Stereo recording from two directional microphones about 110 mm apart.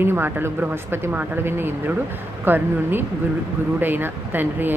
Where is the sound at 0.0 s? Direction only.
20° right (ahead or behind).